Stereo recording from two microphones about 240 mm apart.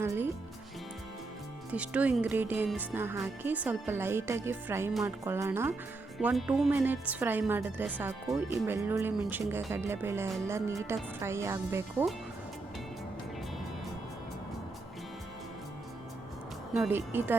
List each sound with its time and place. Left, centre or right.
1.7 s a woman's voice: centre
16.7 s a woman's voice: centre